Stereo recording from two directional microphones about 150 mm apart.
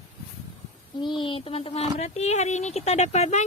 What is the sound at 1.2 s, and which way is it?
Speech, 35° left (ahead or behind).